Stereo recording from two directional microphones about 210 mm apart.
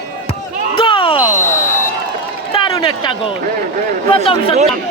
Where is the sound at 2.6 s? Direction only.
20° left (ahead or behind).